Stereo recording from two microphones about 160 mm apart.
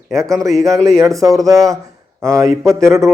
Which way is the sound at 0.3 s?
20° right (ahead or behind).